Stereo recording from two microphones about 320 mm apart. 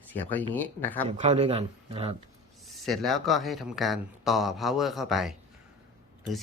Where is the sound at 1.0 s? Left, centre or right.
Centre.